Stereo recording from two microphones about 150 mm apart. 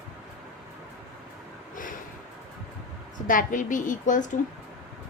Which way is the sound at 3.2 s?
60° left (ahead or behind).